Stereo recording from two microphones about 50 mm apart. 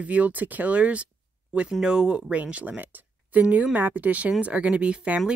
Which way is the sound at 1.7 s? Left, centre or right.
Centre.